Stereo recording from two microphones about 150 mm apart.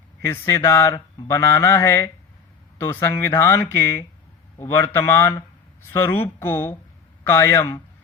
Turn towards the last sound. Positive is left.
turn(degrees=20)  # may be behind; listen again after turning